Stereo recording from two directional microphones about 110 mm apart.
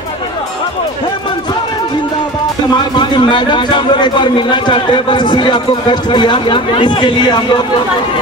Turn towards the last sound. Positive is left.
turn(degrees=45)  # may be behind; listen again after turning